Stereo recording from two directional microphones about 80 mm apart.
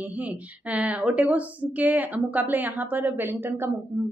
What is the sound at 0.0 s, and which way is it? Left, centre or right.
A woman's voice, right.